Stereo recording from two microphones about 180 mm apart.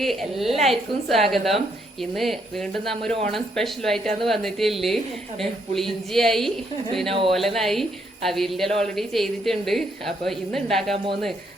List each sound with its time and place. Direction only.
0.0 s a woman's voice: centre (ahead or behind)
2.7 s a woman's voice: centre (ahead or behind)
7.1 s speech: 30° right (ahead or behind)
7.3 s a woman's voice: centre (ahead or behind)
10.9 s speech: 30° right (ahead or behind)